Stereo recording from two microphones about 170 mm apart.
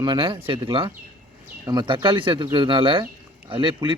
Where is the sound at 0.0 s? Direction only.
25° right (ahead or behind).